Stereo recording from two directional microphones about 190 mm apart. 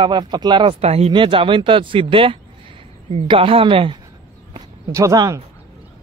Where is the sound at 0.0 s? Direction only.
25° right (ahead or behind).